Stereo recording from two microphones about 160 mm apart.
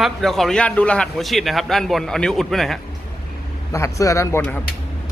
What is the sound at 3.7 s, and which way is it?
Speech, 20° left (ahead or behind).